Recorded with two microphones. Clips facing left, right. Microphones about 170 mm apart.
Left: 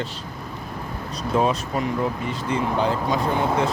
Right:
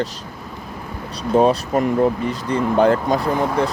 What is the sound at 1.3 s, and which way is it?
Speech, 35° right (ahead or behind).